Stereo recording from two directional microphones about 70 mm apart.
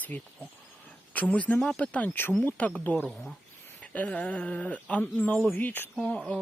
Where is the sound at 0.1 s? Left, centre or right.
Left.